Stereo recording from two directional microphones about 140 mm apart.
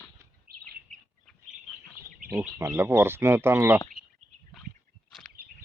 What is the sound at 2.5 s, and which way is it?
Speech, 15° right (ahead or behind).